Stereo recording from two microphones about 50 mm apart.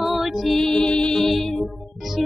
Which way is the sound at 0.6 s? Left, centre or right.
Centre.